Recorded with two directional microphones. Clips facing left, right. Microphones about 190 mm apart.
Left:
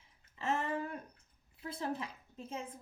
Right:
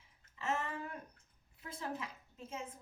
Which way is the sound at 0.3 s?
35° left (ahead or behind).